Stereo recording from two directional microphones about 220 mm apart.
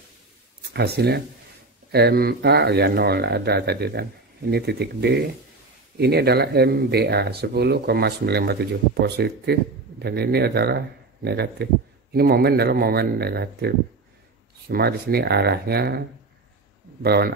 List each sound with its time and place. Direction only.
0.7 s speech: 45° right (ahead or behind)
17.0 s speech: 45° right (ahead or behind)